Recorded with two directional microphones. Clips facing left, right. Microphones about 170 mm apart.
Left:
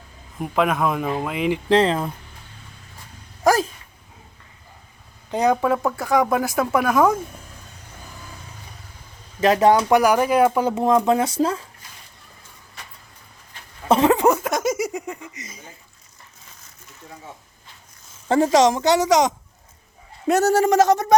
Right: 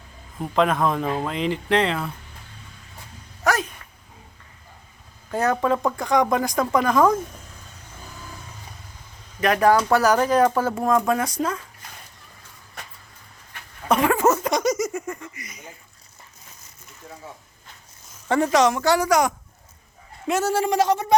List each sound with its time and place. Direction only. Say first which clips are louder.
0.3 s speech: even; 10° left (ahead or behind)
1.7 s speech: left 4 dB; 35° left (ahead or behind)
3.4 s dog: left 5 dB; 35° left (ahead or behind)
5.3 s speech: left 2 dB; 15° left (ahead or behind)
9.4 s speech: left 2 dB; 25° left (ahead or behind)
13.8 s a sound: left 3 dB; 25° left (ahead or behind)
14.4 s laughter: even; 5° left (ahead or behind); by 15.6 s 25° left (ahead or behind)
18.3 s speech: left 3 dB; 30° left (ahead or behind)
20.2 s speech: left 5 dB; 40° left (ahead or behind)